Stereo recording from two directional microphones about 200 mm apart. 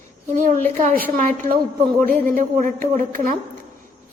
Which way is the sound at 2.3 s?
40° right (ahead or behind).